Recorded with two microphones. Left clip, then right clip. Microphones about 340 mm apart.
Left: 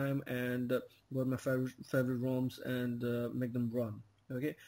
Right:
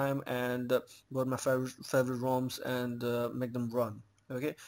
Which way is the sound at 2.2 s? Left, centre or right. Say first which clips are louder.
Right 5 dB; right.